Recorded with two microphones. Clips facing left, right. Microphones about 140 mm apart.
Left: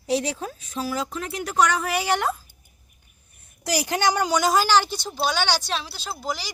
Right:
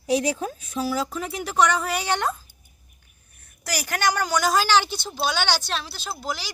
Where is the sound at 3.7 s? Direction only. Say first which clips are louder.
Left 2 dB; 20° left (ahead or behind).